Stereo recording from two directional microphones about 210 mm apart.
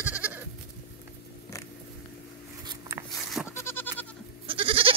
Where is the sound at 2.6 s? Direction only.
15° right (ahead or behind).